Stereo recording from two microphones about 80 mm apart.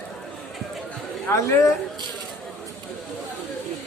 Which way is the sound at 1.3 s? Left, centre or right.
Left.